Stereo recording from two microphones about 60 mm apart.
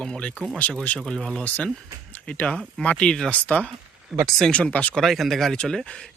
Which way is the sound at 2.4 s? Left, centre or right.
Centre.